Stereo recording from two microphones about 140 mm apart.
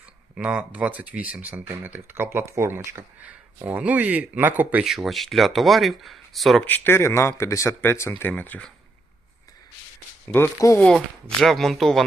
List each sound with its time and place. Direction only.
0.3 s speech: 10° right (ahead or behind)
6.7 s speech: 15° left (ahead or behind)
10.2 s speech: 20° left (ahead or behind)
10.8 s speech: 5° left (ahead or behind)